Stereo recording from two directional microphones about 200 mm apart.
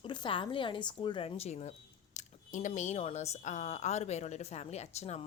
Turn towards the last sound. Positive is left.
turn(degrees=35)  # may be behind; listen again after turning